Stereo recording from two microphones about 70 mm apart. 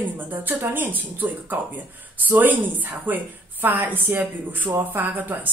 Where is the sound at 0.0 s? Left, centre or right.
Right.